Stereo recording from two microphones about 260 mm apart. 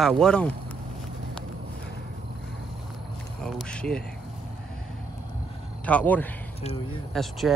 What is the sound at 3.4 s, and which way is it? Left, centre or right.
Speech, centre.